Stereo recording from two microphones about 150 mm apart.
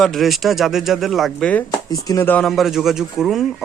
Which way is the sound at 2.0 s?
20° left (ahead or behind).